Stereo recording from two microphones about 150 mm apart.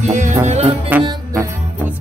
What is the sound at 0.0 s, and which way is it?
Music, 55° right (ahead or behind).